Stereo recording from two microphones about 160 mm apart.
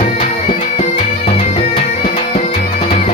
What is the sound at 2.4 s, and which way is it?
Music, 50° left (ahead or behind).